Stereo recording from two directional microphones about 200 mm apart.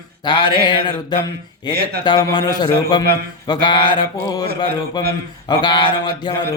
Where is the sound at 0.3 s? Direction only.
25° left (ahead or behind).